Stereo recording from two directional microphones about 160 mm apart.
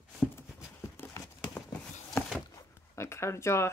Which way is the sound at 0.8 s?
15° left (ahead or behind).